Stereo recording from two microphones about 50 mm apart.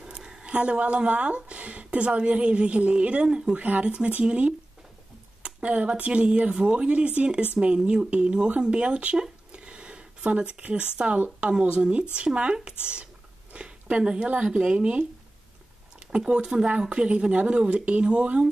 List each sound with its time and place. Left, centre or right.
0.0 s speech: centre
9.5 s a sound: right
11.8 s speech: centre
16.1 s speech: centre